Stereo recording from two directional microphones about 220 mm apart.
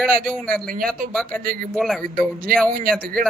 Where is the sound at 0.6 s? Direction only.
40° right (ahead or behind).